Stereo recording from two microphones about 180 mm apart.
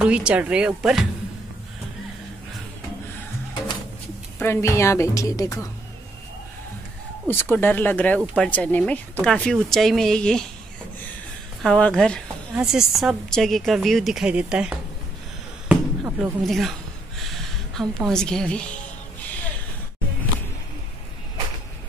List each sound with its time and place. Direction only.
0.0 s a woman's voice: 5° right (ahead or behind)
4.4 s a woman's voice: 15° left (ahead or behind)
7.2 s a woman's voice: 10° left (ahead or behind)
11.6 s a woman's voice: 5° left (ahead or behind)
17.7 s a woman's voice: 5° left (ahead or behind)